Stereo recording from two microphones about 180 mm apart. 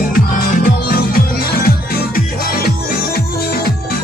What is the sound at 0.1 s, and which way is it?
Music, 50° left (ahead or behind).